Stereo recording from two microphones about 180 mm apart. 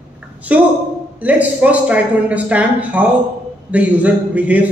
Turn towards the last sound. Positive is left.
turn(degrees=-10)  # may be behind; listen again after turning